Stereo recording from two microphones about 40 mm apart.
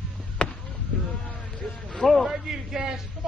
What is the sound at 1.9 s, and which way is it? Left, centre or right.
Speech, centre.